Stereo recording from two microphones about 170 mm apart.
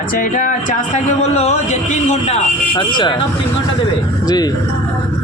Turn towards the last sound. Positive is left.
turn(degrees=25)  # may be behind; listen again after turning